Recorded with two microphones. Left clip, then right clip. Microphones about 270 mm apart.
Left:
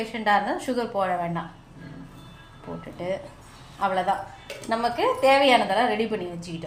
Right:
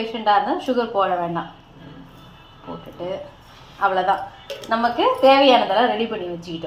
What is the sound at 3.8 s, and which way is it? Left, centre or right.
A woman's voice, left.